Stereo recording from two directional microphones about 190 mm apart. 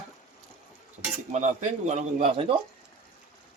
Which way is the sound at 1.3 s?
40° right (ahead or behind).